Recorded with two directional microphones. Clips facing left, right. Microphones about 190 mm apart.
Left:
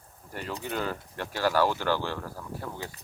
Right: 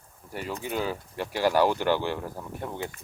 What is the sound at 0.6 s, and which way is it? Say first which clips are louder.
Speech: right 2 dB; 10° right (ahead or behind).